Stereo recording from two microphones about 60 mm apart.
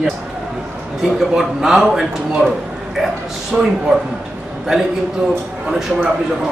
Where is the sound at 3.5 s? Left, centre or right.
Right.